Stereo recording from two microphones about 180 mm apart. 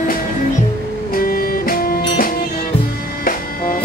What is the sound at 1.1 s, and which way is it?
Music, 55° left (ahead or behind).